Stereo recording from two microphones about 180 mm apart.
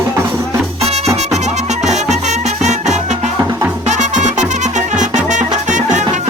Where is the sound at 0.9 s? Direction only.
35° right (ahead or behind).